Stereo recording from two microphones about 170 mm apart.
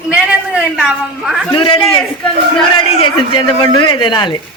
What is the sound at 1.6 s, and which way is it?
Speech, 30° left (ahead or behind).